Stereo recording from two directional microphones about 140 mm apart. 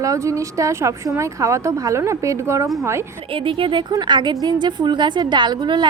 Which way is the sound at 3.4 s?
35° right (ahead or behind).